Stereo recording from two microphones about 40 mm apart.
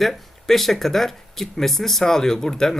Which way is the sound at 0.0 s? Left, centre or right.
Centre.